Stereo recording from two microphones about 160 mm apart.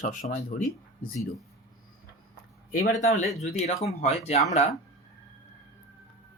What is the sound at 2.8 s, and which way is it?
Speech, 55° left (ahead or behind).